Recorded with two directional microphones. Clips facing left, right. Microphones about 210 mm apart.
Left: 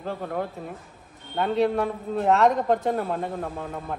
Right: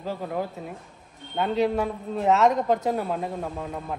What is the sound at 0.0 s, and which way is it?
A man's voice, centre (ahead or behind).